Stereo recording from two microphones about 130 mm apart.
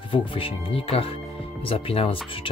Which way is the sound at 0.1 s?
45° left (ahead or behind).